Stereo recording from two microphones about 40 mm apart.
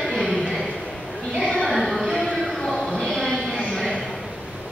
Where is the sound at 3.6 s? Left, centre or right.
Left.